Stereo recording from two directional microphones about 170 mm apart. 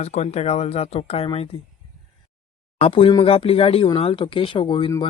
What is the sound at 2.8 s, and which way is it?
Speech, 30° left (ahead or behind).